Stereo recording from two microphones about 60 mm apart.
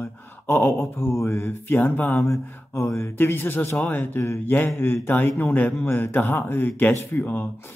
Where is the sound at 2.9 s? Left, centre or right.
Left.